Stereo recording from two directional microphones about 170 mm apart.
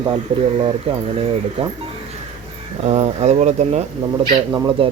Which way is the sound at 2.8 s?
40° right (ahead or behind).